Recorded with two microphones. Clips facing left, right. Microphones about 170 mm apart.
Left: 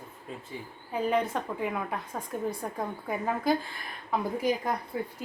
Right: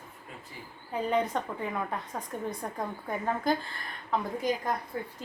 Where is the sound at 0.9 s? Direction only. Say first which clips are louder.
Left 1 dB; 5° left (ahead or behind).